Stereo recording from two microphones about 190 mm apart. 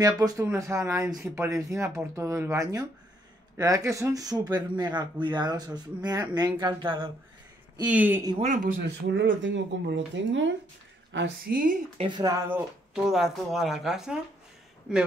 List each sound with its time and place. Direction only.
0.0 s speech: 20° right (ahead or behind)
7.9 s speech: 10° right (ahead or behind)
8.4 s speech: 45° right (ahead or behind)
8.8 s speech: 65° right (ahead or behind)
11.1 s a woman's voice: 60° right (ahead or behind)
12.0 s speech: 20° right (ahead or behind); by 15.0 s 5° right (ahead or behind)